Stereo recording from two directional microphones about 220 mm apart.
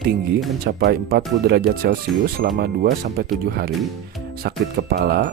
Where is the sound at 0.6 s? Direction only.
45° right (ahead or behind).